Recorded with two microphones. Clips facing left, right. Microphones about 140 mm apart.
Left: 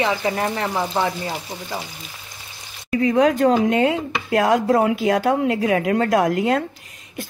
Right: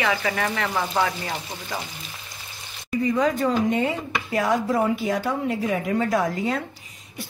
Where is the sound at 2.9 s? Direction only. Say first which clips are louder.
Left 5 dB; 65° left (ahead or behind).